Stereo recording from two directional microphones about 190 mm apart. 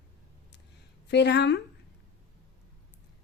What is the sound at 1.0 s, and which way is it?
Speech, 60° left (ahead or behind).